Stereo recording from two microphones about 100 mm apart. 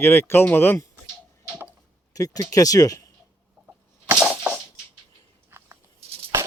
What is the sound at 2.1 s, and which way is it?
Speech, 35° left (ahead or behind).